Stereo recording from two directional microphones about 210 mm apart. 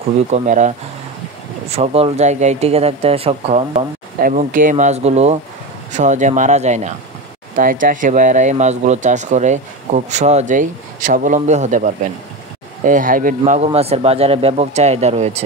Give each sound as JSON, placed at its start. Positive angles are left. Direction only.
{"t": 0.3, "sound": "speech", "side_deg": -35}
{"t": 13.4, "sound": "speech", "side_deg": -30}